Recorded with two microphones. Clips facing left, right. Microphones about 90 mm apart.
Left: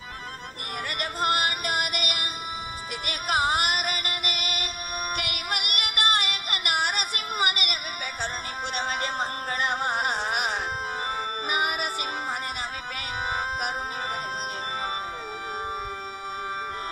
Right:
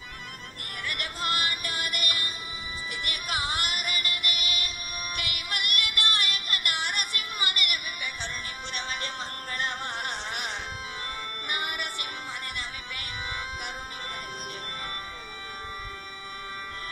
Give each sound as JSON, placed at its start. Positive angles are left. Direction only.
{"t": 0.8, "sound": "music", "side_deg": 55}
{"t": 3.3, "sound": "music", "side_deg": 55}
{"t": 13.3, "sound": "music", "side_deg": 55}